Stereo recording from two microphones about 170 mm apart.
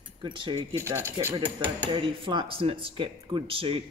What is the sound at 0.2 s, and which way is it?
Speech, 30° right (ahead or behind).